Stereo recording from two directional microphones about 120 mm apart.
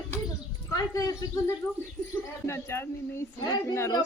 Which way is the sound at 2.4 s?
20° left (ahead or behind).